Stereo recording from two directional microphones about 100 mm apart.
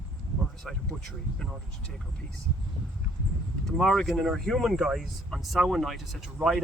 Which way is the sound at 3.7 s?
5° left (ahead or behind).